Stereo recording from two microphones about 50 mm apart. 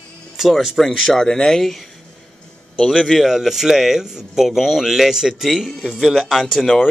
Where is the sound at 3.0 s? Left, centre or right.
Centre.